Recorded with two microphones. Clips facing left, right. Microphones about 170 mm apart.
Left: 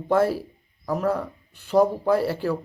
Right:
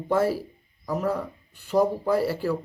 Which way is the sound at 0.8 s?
55° left (ahead or behind).